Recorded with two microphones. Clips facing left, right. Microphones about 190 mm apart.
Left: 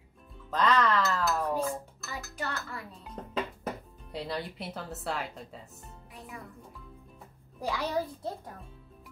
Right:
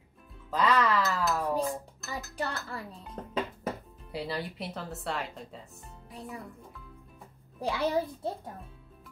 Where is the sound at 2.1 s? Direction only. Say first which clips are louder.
Right 2 dB; 35° right (ahead or behind).